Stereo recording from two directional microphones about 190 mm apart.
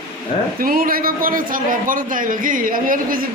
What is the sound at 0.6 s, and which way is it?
A man's voice, 50° right (ahead or behind).